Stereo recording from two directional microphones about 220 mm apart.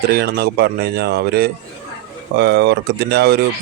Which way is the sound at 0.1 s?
45° right (ahead or behind).